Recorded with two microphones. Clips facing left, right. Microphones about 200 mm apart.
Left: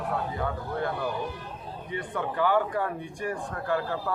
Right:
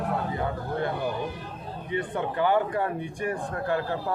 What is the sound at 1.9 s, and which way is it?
Speech, 20° right (ahead or behind).